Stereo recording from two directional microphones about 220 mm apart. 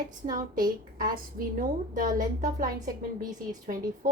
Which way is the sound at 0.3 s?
40° right (ahead or behind).